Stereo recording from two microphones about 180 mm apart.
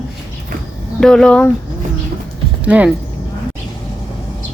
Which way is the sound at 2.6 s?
5° right (ahead or behind).